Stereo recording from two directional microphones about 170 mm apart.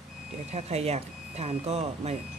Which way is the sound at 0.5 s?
40° right (ahead or behind).